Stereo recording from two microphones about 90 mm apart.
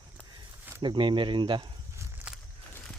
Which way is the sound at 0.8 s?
65° right (ahead or behind).